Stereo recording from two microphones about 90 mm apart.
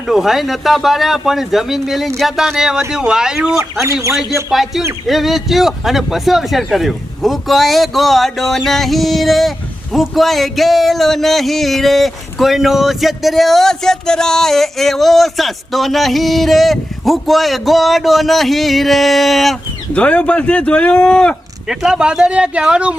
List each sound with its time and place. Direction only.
0.1 s speech: 5° right (ahead or behind)
3.6 s speech: 30° right (ahead or behind)
4.1 s speech: 5° right (ahead or behind)
19.9 s speech: 15° left (ahead or behind)
21.7 s speech: 5° right (ahead or behind)